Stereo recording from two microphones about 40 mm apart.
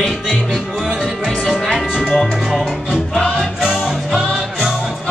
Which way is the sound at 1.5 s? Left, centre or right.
Centre.